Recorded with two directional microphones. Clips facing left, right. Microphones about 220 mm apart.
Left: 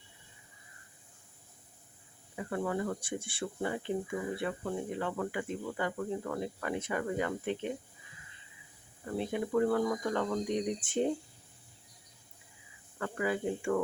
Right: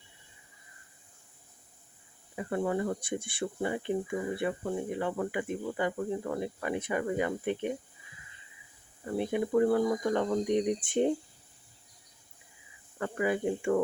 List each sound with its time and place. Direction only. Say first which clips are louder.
2.3 s speech: right 3 dB; 20° right (ahead or behind)
9.1 s speech: right 3 dB; 15° right (ahead or behind)
13.0 s speech: right 3 dB; 20° right (ahead or behind)